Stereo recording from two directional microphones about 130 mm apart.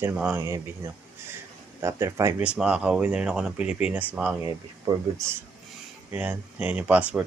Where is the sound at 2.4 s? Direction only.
5° right (ahead or behind).